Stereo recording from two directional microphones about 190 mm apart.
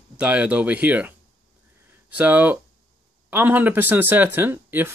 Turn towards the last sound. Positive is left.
turn(degrees=-10)  # may be behind; listen again after turning